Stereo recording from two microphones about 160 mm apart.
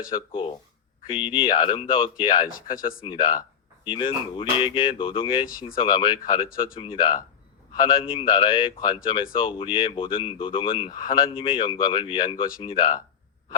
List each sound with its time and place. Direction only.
0.3 s speech: 35° left (ahead or behind)
2.5 s speech: 60° left (ahead or behind)
3.0 s speech: 30° left (ahead or behind)
6.5 s speech: 60° left (ahead or behind)
6.7 s speech: 35° left (ahead or behind)